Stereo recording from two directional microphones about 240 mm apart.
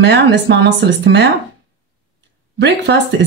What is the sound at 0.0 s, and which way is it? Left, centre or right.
Speech, right.